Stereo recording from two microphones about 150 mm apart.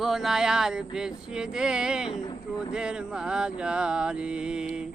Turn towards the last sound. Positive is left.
turn(degrees=-5)  # may be behind; listen again after turning